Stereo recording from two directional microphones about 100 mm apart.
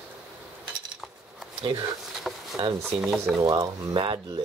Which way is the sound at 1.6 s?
50° right (ahead or behind).